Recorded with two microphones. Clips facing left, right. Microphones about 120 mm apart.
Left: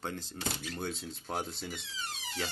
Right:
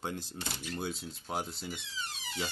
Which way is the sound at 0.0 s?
15° right (ahead or behind).